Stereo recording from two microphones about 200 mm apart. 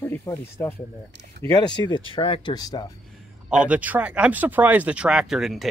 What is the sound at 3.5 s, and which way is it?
Speech, 5° right (ahead or behind).